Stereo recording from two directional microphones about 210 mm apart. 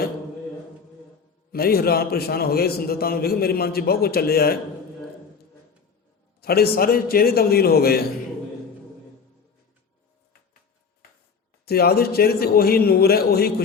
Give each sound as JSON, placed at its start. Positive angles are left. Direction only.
{"t": 1.5, "sound": "a man's voice", "side_deg": 45}
{"t": 6.4, "sound": "a man's voice", "side_deg": 45}
{"t": 11.6, "sound": "a man's voice", "side_deg": 50}